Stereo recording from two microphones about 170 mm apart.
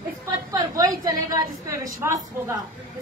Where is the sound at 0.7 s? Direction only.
20° right (ahead or behind).